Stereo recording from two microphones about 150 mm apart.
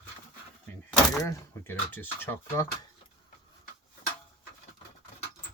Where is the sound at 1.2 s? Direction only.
20° left (ahead or behind).